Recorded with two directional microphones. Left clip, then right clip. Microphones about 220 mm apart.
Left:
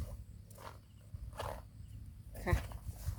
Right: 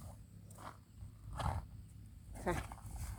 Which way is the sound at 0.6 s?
35° left (ahead or behind).